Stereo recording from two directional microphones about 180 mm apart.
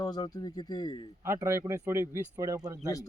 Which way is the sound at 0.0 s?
20° left (ahead or behind).